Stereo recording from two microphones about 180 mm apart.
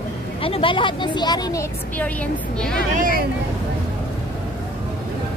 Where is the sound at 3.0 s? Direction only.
50° right (ahead or behind).